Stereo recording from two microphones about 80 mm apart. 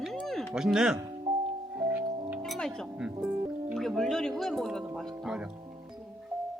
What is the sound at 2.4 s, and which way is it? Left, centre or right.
Music, centre.